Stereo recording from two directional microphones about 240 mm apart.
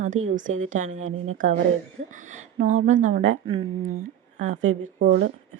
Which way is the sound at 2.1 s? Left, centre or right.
Right.